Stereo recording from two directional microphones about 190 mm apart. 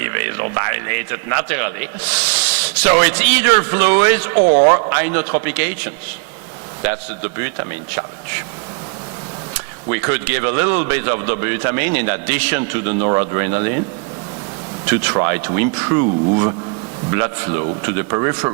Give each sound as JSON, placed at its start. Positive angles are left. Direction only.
{"t": 0.0, "sound": "a man's voice", "side_deg": -20}
{"t": 9.9, "sound": "a man's voice", "side_deg": -15}
{"t": 15.1, "sound": "speech", "side_deg": -25}